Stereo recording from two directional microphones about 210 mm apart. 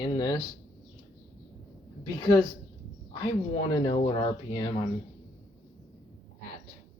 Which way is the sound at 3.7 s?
20° left (ahead or behind).